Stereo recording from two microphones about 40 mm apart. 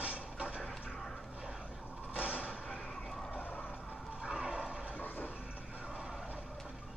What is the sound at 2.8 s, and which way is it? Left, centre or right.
Vehicle, centre.